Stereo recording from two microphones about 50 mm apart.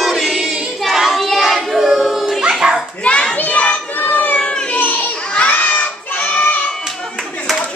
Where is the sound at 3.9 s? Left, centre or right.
Left.